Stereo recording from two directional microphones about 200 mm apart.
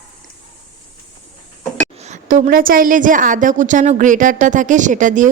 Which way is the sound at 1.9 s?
35° right (ahead or behind).